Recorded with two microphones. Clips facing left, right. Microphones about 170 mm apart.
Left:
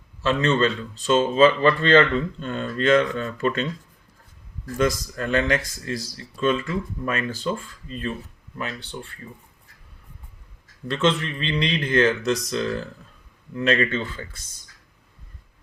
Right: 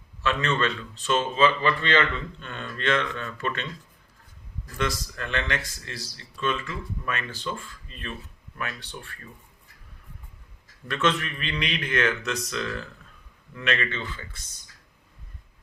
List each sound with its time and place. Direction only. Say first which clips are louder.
0.2 s speech: left 5 dB; 35° left (ahead or behind)
4.8 s speech: left 7 dB; 40° left (ahead or behind); by 9.3 s 25° left (ahead or behind)
10.8 s speech: left 4 dB; 25° left (ahead or behind)